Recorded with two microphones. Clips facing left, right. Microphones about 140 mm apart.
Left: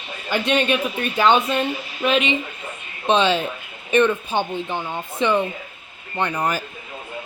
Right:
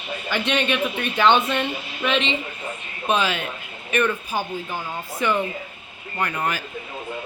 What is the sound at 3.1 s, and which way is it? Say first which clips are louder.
Speech: left 4 dB; 30° left (ahead or behind).